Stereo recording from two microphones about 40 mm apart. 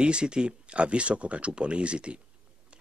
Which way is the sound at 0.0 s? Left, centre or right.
Right.